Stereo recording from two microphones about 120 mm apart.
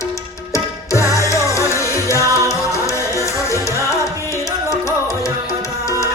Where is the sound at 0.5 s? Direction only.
25° left (ahead or behind).